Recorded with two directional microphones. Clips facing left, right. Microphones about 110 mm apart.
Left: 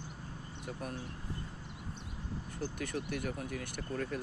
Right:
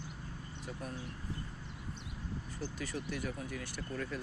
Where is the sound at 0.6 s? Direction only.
60° left (ahead or behind).